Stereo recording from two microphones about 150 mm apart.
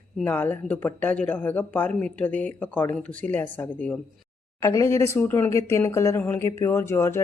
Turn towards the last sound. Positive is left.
turn(degrees=15)  # may be behind; listen again after turning